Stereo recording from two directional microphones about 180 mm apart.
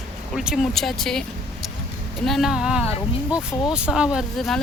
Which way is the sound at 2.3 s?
Centre (ahead or behind).